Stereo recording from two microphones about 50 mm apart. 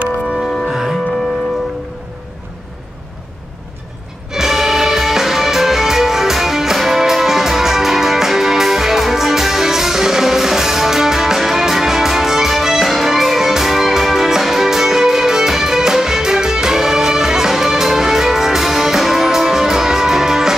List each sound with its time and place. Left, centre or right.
0.4 s music: centre
4.3 s music: centre